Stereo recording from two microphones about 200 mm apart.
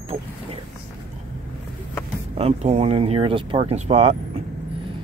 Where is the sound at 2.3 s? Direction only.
30° right (ahead or behind).